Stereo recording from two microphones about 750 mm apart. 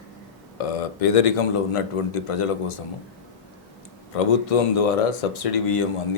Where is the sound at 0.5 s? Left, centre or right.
Left.